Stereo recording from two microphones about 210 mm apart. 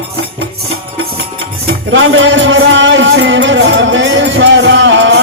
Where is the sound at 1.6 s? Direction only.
65° right (ahead or behind).